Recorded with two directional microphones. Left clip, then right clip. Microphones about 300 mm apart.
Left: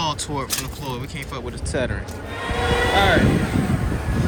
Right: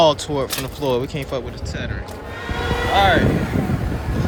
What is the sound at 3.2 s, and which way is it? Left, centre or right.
Vehicle, left.